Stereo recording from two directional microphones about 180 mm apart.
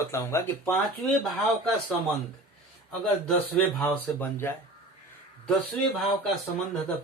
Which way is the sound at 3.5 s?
10° left (ahead or behind).